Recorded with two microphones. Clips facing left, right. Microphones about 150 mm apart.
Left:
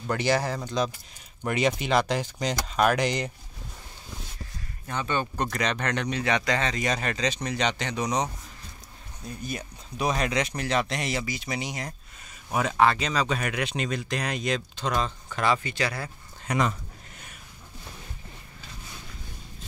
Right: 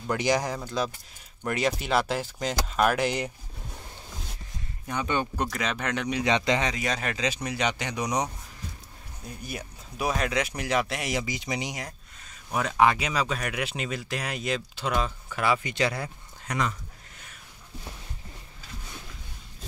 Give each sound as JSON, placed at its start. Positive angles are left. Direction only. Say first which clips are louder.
{"t": 0.2, "sound": "speech", "louder": "left 1 dB", "side_deg": -15}
{"t": 4.8, "sound": "speech", "louder": "even", "side_deg": -15}
{"t": 5.4, "sound": "speech", "louder": "left 2 dB", "side_deg": -5}
{"t": 6.7, "sound": "speech", "louder": "left 2 dB", "side_deg": -5}
{"t": 9.4, "sound": "speech", "louder": "left 2 dB", "side_deg": -10}
{"t": 15.7, "sound": "speech", "louder": "right 2 dB", "side_deg": -20}